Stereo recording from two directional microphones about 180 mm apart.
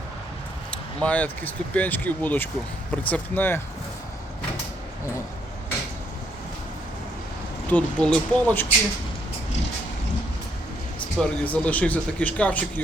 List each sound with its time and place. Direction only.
0.7 s speech: 5° left (ahead or behind)
7.7 s speech: 5° left (ahead or behind)
11.2 s speech: 10° left (ahead or behind)